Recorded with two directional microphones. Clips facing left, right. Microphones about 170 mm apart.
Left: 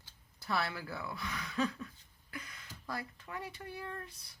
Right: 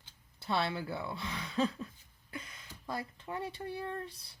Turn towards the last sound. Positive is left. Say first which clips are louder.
# right 5 dB
turn(degrees=-30)  # may be behind; listen again after turning